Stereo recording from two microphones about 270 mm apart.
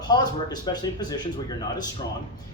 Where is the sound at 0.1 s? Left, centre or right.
Centre.